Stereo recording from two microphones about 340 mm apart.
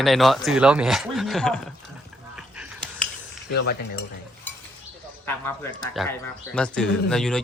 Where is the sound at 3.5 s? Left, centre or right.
Left.